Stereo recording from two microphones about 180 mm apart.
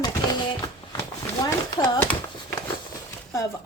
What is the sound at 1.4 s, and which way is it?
Speech, 10° left (ahead or behind).